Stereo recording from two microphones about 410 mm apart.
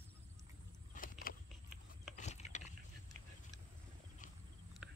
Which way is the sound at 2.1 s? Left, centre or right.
Centre.